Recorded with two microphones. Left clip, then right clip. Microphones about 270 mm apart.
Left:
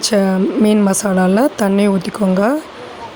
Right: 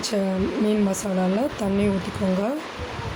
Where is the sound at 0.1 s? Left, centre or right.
Left.